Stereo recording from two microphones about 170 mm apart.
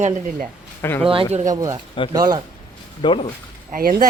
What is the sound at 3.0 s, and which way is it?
Speech, 30° left (ahead or behind).